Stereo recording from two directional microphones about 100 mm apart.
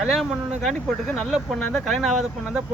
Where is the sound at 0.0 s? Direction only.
Centre (ahead or behind).